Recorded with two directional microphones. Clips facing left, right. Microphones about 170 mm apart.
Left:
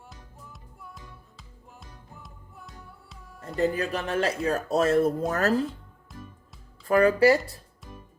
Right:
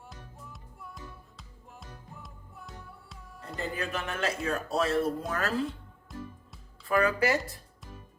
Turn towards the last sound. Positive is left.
turn(degrees=0)  # may be behind; listen again after turning